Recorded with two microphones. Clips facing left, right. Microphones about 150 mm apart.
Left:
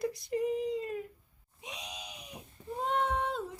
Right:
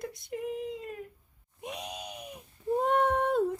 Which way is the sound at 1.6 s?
55° right (ahead or behind).